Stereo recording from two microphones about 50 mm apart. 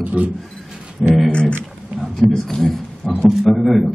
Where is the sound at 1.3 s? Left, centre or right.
Left.